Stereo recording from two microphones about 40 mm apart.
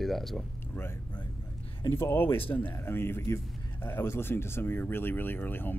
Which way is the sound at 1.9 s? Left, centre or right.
Left.